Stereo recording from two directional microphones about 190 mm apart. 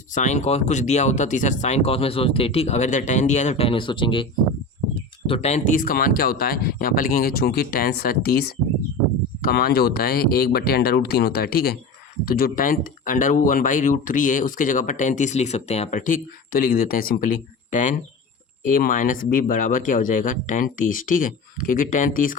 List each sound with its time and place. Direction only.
0.1 s speech: 40° left (ahead or behind)